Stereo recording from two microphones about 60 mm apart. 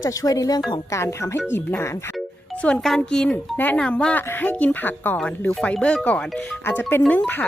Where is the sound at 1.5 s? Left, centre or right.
Left.